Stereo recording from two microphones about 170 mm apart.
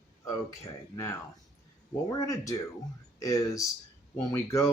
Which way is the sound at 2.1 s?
20° left (ahead or behind).